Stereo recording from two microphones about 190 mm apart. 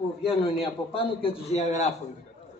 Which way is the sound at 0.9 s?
30° left (ahead or behind).